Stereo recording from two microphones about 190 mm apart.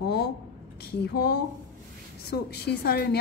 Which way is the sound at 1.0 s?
60° left (ahead or behind).